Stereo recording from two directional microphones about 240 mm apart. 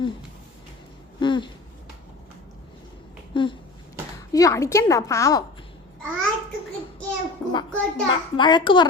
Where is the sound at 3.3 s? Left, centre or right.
Centre.